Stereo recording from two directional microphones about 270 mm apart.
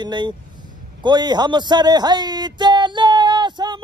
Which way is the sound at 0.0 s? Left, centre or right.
Centre.